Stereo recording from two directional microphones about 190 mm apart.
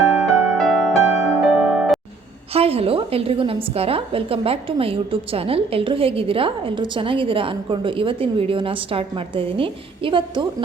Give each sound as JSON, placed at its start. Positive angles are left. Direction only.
{"t": 0.1, "sound": "music", "side_deg": -5}
{"t": 2.5, "sound": "a woman's voice", "side_deg": -30}